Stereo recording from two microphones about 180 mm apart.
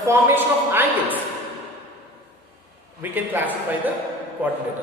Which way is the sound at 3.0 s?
10° right (ahead or behind).